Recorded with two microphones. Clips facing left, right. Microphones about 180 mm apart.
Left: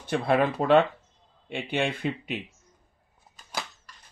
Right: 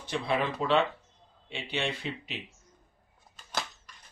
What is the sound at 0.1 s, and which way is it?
Speech, 55° left (ahead or behind).